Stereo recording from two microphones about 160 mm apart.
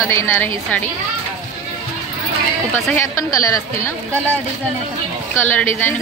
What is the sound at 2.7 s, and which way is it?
Speech, 15° left (ahead or behind).